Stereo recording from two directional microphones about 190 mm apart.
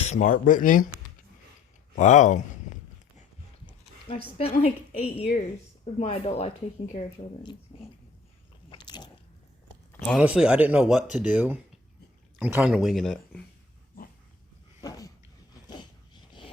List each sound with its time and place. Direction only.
0.0 s speech: 40° left (ahead or behind)
2.0 s speech: 40° left (ahead or behind)
4.4 s speech: 35° left (ahead or behind)
8.7 s biting: 25° left (ahead or behind)
9.9 s a sound: 10° left (ahead or behind)
10.2 s speech: 5° right (ahead or behind)
14.0 s dog: 50° left (ahead or behind)
14.8 s a sound: 20° left (ahead or behind)